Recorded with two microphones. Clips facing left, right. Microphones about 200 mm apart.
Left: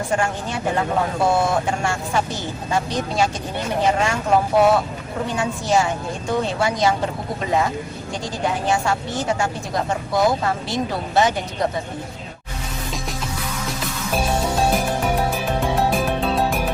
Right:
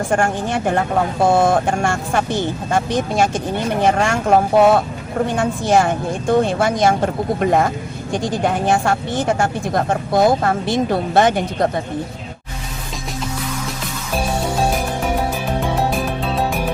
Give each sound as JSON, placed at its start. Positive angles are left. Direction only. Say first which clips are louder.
{"t": 0.1, "sound": "a woman's voice", "louder": "right 5 dB", "side_deg": -50}
{"t": 15.6, "sound": "music", "louder": "left 1 dB", "side_deg": 0}